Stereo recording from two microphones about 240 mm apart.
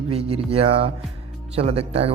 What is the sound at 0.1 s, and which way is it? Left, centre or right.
Speech, right.